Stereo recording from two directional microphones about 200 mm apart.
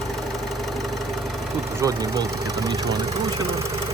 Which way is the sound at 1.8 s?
15° right (ahead or behind).